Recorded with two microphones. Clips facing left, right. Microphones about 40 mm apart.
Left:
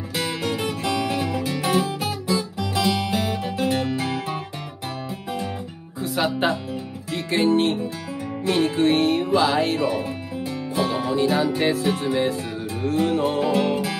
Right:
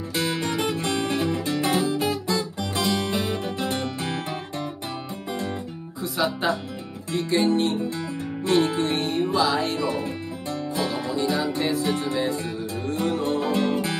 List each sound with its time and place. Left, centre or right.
0.5 s music: right
1.6 s guitar: left
2.8 s music: centre
3.2 s music: left
5.9 s music: left